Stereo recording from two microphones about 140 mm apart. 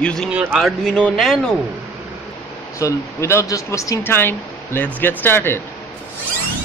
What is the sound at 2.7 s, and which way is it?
Speech, 20° left (ahead or behind).